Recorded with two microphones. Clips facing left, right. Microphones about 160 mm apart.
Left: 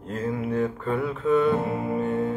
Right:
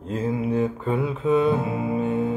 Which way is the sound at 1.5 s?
10° right (ahead or behind).